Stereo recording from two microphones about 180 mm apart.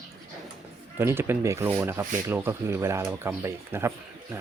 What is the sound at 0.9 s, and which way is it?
Speech, 10° right (ahead or behind).